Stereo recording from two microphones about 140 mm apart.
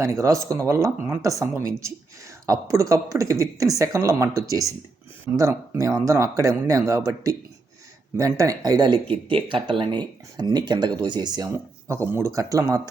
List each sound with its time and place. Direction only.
0.0 s speech: 20° right (ahead or behind)